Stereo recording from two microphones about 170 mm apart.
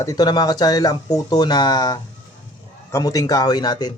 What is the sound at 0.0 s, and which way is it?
Speech, 20° left (ahead or behind).